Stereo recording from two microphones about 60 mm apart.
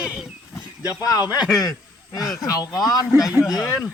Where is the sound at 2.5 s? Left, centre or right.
Left.